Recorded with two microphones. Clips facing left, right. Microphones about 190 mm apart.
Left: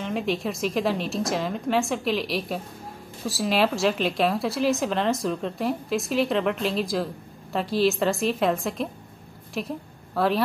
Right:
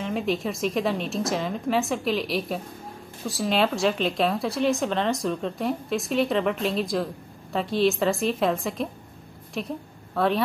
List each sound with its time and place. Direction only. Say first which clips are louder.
0.0 s a woman's voice: even; centre (ahead or behind)